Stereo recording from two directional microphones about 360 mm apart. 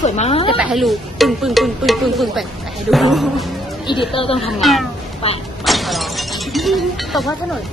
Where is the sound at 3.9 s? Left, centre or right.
Centre.